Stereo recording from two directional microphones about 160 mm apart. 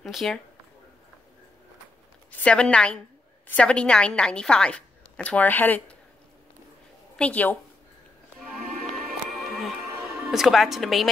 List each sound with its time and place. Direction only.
0.0 s speech: centre (ahead or behind)
2.3 s a woman's voice: 5° left (ahead or behind)
7.2 s a woman's voice: 10° left (ahead or behind)
9.3 s music: centre (ahead or behind)
9.8 s speech: 15° right (ahead or behind)